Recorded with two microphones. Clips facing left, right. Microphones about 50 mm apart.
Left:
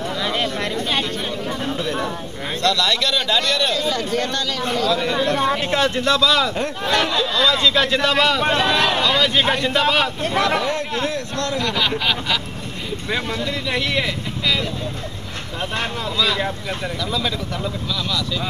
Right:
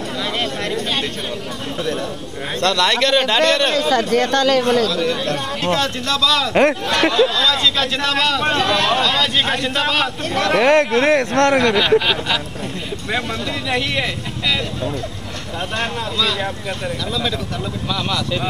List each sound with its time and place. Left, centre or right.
2.6 s a man's voice: right
4.8 s speech: left
7.0 s a man's voice: right
7.3 s speech: left
9.8 s a man's voice: centre
10.2 s speech: left
10.6 s speech: right